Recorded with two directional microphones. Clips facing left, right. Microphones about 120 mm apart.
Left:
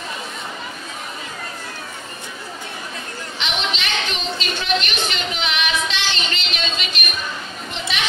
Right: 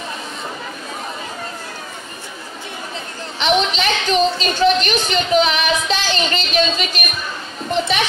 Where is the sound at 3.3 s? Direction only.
40° right (ahead or behind).